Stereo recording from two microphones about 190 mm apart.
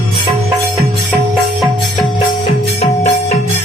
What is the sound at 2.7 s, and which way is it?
Music, 35° left (ahead or behind).